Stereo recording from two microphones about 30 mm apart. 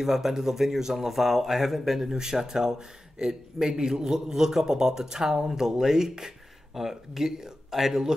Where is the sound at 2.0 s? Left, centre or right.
Right.